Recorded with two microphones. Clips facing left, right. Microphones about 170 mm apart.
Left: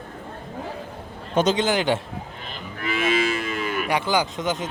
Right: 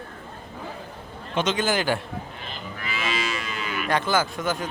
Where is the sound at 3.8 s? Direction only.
15° left (ahead or behind).